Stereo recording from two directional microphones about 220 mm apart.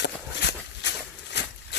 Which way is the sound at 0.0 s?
50° left (ahead or behind).